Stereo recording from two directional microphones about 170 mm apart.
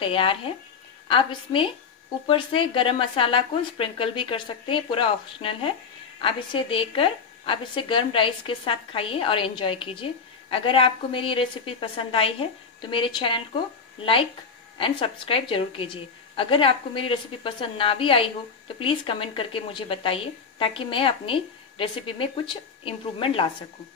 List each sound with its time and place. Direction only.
0.0 s a woman's voice: 30° left (ahead or behind)
14.8 s a woman's voice: 30° left (ahead or behind)